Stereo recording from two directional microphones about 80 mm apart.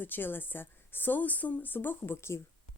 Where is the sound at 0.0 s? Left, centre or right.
Left.